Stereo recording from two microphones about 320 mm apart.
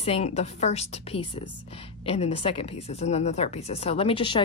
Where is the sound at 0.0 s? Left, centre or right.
Centre.